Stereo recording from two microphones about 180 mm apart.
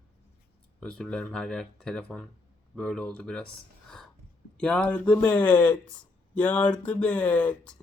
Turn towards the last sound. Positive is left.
turn(degrees=10)  # may be behind; listen again after turning